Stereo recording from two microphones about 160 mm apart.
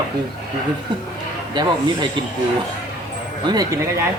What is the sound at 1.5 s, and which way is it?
Speech, 30° right (ahead or behind).